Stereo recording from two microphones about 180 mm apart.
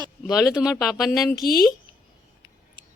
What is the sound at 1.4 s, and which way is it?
Speech, 55° left (ahead or behind).